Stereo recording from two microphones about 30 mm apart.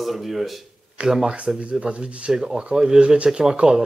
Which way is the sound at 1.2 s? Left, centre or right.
Right.